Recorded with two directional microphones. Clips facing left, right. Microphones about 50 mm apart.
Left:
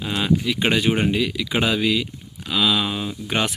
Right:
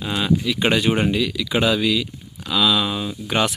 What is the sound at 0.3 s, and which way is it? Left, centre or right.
Speech, left.